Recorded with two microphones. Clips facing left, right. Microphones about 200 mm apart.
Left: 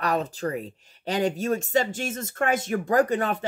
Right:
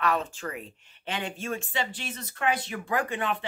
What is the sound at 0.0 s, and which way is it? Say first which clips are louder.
Speech: left 3 dB; 40° left (ahead or behind).